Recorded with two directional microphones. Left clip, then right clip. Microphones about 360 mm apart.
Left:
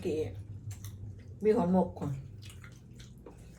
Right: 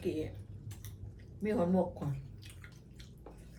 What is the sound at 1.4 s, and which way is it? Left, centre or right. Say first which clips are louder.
Cutlery: left 5 dB; centre.